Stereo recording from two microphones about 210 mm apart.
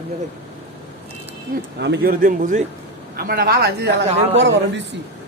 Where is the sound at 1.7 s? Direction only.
55° right (ahead or behind).